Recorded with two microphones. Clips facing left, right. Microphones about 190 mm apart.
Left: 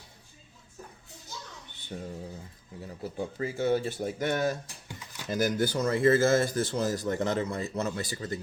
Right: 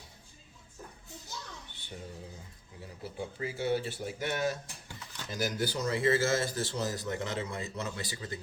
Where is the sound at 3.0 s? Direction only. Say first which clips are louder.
Left 4 dB; 45° left (ahead or behind).